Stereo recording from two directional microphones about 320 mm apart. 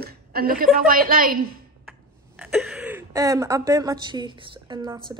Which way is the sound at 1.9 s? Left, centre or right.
Centre.